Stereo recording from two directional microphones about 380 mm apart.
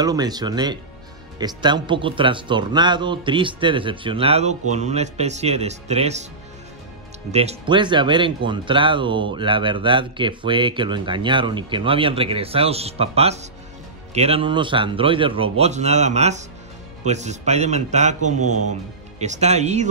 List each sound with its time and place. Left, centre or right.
0.0 s speech: centre
7.2 s speech: centre